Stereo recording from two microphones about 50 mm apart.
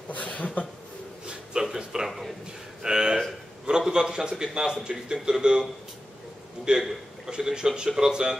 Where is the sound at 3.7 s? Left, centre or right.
Centre.